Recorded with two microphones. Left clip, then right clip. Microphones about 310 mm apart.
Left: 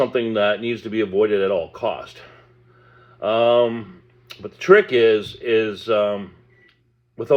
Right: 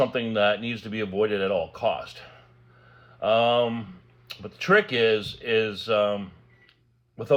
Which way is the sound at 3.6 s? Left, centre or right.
Centre.